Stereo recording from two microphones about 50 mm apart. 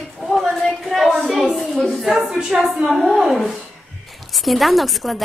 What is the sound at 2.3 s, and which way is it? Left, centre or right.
Speech, centre.